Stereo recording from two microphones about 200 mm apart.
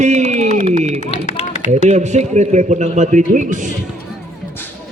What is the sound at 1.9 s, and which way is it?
A man's voice, 35° right (ahead or behind).